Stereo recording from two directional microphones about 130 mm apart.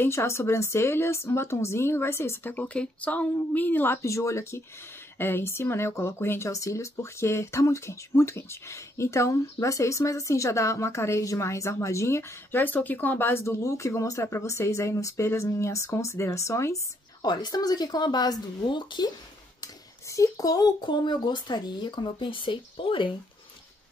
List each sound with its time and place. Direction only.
0.0 s speech: 20° left (ahead or behind); by 23.0 s 40° left (ahead or behind)